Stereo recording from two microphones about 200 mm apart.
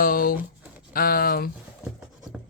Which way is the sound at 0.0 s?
45° left (ahead or behind).